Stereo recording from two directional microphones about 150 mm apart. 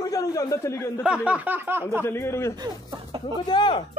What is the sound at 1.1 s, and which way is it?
Speech, 10° right (ahead or behind).